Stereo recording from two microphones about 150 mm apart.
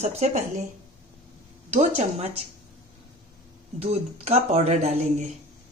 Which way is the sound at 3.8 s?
45° right (ahead or behind).